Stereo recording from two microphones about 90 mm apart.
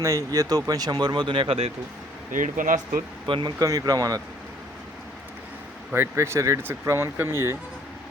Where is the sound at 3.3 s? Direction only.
70° right (ahead or behind).